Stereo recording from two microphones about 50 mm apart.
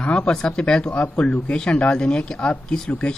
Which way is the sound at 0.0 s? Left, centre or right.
Centre.